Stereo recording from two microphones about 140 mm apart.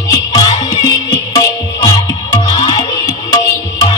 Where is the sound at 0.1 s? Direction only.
30° left (ahead or behind).